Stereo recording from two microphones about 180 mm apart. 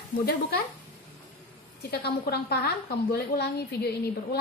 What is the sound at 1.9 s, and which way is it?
A woman's voice, 60° left (ahead or behind).